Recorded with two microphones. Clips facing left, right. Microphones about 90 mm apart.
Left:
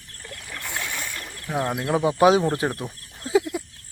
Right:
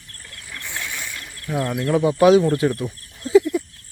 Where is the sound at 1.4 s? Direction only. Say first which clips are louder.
Right 2 dB; 25° left (ahead or behind).